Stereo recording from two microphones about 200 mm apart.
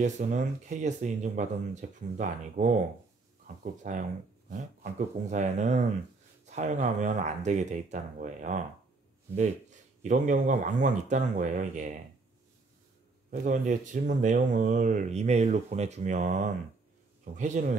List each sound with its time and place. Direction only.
0.0 s speech: 40° right (ahead or behind)
13.3 s a man's voice: 40° right (ahead or behind)